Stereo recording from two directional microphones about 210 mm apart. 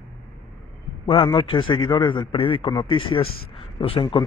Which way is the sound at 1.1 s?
25° left (ahead or behind).